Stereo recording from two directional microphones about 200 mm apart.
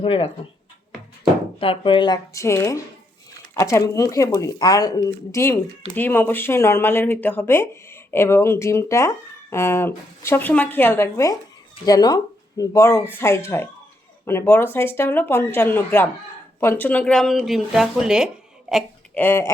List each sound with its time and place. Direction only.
0.0 s speech: 25° left (ahead or behind)
1.5 s speech: 25° left (ahead or behind); by 19.5 s 10° left (ahead or behind)